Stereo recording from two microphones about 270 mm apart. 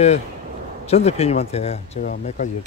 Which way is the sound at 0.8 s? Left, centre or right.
Left.